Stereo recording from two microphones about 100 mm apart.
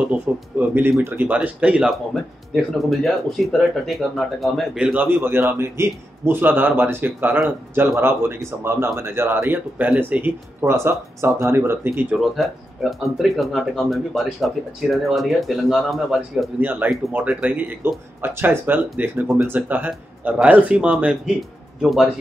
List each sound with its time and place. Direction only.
0.0 s speech: 15° right (ahead or behind)
2.5 s speech: centre (ahead or behind)
4.7 s a man's voice: 15° right (ahead or behind)
12.4 s speech: centre (ahead or behind)
16.5 s a man's voice: 20° right (ahead or behind)
21.4 s speech: centre (ahead or behind)